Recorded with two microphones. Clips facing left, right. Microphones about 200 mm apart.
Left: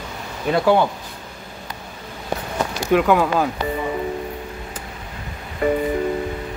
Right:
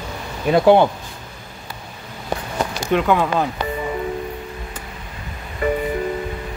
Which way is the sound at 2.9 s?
5° left (ahead or behind).